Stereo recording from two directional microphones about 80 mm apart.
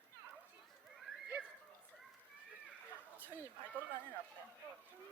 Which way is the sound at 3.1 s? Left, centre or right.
Right.